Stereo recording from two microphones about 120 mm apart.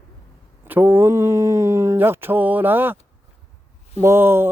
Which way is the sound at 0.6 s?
15° right (ahead or behind).